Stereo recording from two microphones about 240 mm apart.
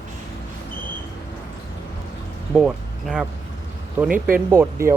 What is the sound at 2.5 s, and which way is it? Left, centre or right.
Speech, centre.